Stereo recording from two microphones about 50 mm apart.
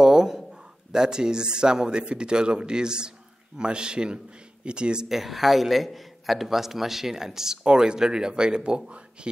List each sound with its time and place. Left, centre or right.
0.0 s a sound: centre
0.5 s speech: centre
5.0 s a man's voice: centre; by 9.3 s right